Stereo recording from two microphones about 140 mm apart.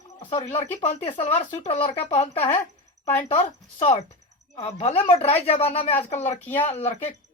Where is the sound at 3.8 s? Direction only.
40° left (ahead or behind); by 6.3 s 55° left (ahead or behind).